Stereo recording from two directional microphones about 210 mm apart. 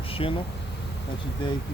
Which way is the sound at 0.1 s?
25° left (ahead or behind).